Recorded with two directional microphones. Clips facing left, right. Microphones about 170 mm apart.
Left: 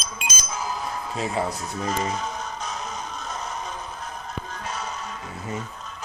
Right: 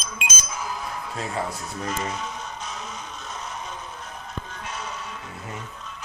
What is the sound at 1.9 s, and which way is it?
Speech, 40° left (ahead or behind).